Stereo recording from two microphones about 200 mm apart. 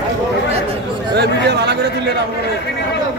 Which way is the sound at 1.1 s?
55° right (ahead or behind).